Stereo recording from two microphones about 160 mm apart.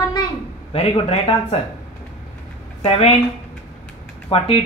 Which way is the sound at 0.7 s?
40° left (ahead or behind).